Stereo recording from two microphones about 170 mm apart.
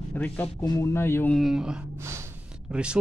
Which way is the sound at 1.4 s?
5° right (ahead or behind).